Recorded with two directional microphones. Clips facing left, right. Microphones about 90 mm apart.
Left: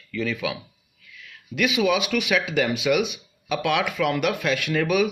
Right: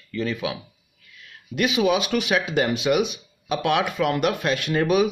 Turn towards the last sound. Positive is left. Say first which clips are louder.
# right 2 dB
turn(degrees=-30)  # may be behind; listen again after turning